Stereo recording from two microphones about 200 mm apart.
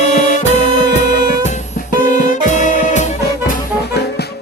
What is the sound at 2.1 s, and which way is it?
Music, 40° left (ahead or behind).